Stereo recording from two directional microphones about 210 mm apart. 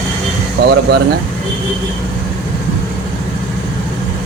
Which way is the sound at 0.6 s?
55° right (ahead or behind).